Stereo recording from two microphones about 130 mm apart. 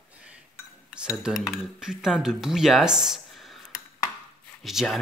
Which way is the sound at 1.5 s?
5° right (ahead or behind).